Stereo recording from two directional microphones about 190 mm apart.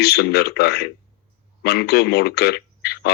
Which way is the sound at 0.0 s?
60° left (ahead or behind).